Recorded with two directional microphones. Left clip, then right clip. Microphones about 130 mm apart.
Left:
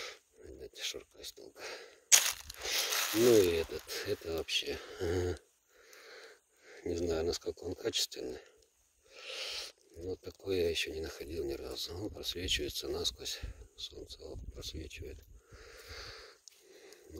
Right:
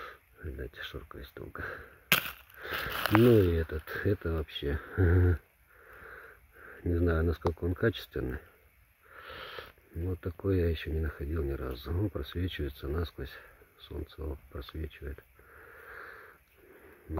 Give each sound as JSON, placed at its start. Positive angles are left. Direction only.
{"t": 0.7, "sound": "speech", "side_deg": 20}
{"t": 2.9, "sound": "speech", "side_deg": 30}
{"t": 15.7, "sound": "a sound", "side_deg": 25}